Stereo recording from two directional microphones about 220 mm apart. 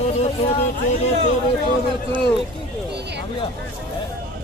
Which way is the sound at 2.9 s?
50° right (ahead or behind).